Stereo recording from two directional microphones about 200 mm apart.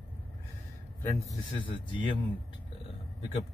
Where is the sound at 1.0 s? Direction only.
15° left (ahead or behind).